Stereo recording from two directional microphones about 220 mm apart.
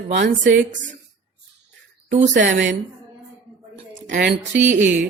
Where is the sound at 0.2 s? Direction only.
40° right (ahead or behind).